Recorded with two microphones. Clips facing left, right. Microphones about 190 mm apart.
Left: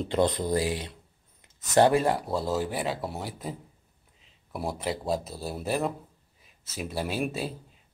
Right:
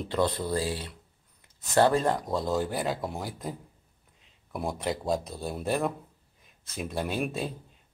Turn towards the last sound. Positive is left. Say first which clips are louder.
# even
turn(degrees=5)  # may be behind; listen again after turning